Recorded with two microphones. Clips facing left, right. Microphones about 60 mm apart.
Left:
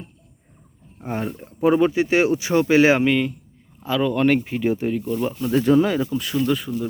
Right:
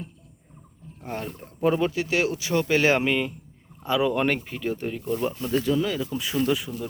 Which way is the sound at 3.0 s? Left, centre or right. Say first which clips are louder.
Left 5 dB; centre.